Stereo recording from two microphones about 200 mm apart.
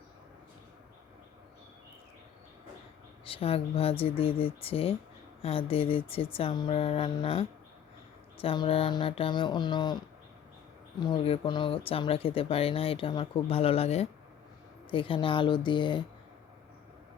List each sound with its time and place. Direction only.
3.2 s speech: 30° left (ahead or behind)
11.0 s speech: 25° left (ahead or behind)